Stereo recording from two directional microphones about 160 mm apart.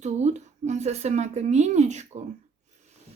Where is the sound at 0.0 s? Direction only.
45° right (ahead or behind).